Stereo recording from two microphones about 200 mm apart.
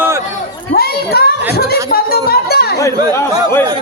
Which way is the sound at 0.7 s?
50° left (ahead or behind).